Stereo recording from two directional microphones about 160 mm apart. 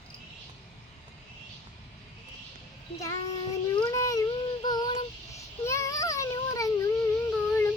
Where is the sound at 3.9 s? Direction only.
20° left (ahead or behind).